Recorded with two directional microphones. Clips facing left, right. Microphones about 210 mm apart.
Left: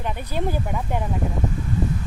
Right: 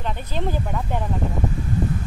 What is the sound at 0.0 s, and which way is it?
Speech, 10° left (ahead or behind).